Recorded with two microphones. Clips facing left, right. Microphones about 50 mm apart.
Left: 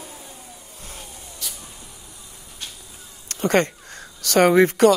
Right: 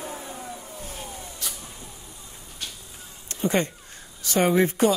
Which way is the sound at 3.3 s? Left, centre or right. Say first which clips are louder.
Left 5 dB; left.